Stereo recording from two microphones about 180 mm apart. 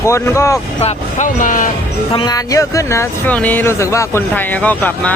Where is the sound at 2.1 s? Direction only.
25° left (ahead or behind).